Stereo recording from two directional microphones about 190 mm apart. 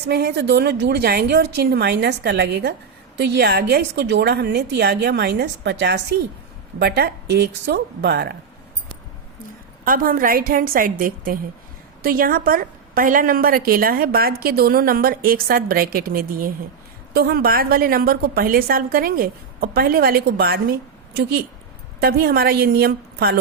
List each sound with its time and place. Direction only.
0.1 s a woman's voice: 60° right (ahead or behind)
9.8 s a woman's voice: 45° right (ahead or behind)
22.0 s a woman's voice: 55° right (ahead or behind)